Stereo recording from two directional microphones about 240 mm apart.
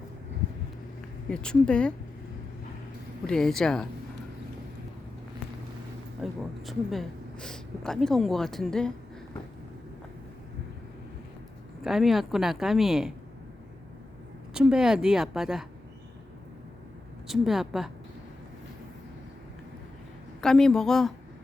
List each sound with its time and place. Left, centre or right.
1.3 s speech: centre
3.2 s speech: centre
6.2 s speech: centre
11.8 s speech: centre
14.5 s speech: centre
17.2 s speech: centre
20.4 s speech: centre